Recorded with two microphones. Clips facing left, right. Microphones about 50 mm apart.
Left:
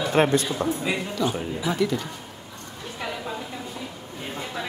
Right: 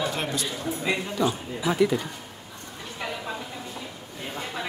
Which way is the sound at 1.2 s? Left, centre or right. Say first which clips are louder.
Even; centre.